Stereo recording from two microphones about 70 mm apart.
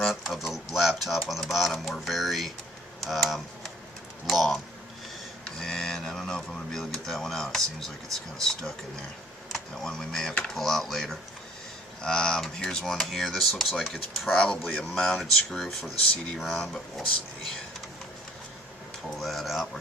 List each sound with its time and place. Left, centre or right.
0.0 s a sound: centre
1.3 s speech: centre
14.3 s speech: centre
15.0 s speech: centre
19.1 s speech: centre